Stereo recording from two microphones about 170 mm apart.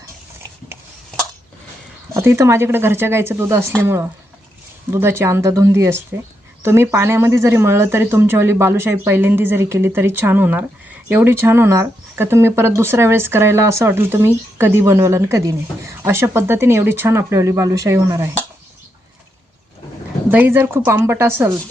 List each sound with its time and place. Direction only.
2.1 s speech: 15° right (ahead or behind)
20.3 s speech: 15° right (ahead or behind)